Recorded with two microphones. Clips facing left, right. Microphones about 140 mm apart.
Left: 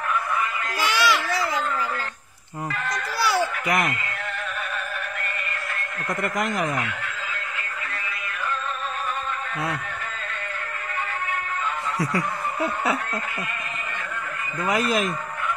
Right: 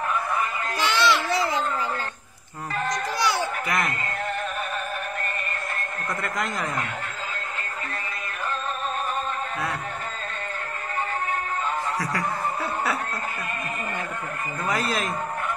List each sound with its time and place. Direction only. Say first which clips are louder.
0.7 s a sound: even; 10° left (ahead or behind)
1.2 s baby cry: right 1 dB; 25° right (ahead or behind)
2.7 s children playing: right 4 dB; 40° right (ahead or behind)
3.6 s speech: left 3 dB; 20° left (ahead or behind)
6.2 s speech: left 5 dB; 20° left (ahead or behind)
14.7 s a man's voice: left 4 dB; 15° left (ahead or behind)